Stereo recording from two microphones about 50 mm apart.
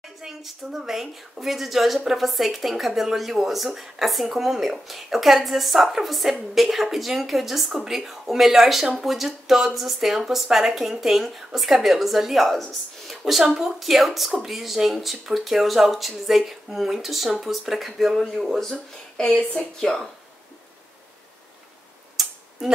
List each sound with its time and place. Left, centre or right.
0.2 s a woman's voice: centre
13.2 s a woman's voice: centre
19.2 s speech: centre
22.1 s tick-tock: centre